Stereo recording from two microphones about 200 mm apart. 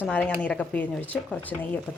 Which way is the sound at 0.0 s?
10° left (ahead or behind).